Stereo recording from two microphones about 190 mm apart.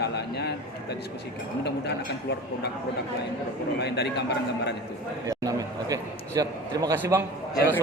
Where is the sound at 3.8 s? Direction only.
60° left (ahead or behind).